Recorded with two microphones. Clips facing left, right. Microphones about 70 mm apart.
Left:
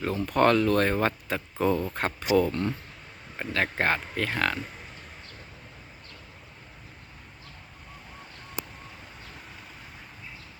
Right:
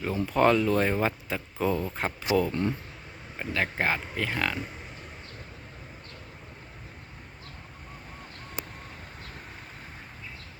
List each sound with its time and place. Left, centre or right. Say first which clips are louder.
0.3 s speech: left 1 dB; centre
2.5 s speech: right 1 dB; centre
3.3 s speech: left 1 dB; centre